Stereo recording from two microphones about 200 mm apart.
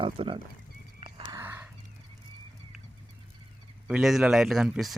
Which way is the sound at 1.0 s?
15° right (ahead or behind).